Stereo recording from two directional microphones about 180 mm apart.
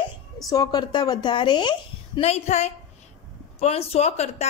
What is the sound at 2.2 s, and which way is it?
A woman's voice, 35° left (ahead or behind).